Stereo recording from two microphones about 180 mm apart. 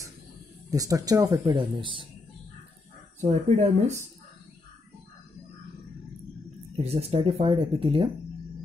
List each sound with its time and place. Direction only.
0.7 s speech: 20° right (ahead or behind)
3.2 s speech: 40° right (ahead or behind)
6.8 s speech: 35° right (ahead or behind)